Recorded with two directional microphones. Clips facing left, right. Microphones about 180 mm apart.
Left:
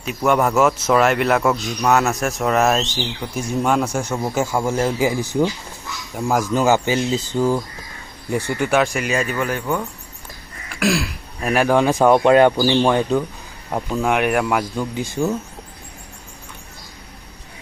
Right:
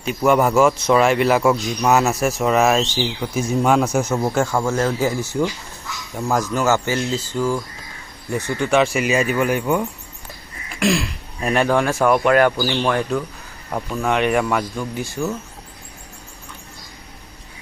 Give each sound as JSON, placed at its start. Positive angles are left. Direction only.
{"t": 0.0, "sound": "a man's voice", "side_deg": 0}
{"t": 10.8, "sound": "speech", "side_deg": 0}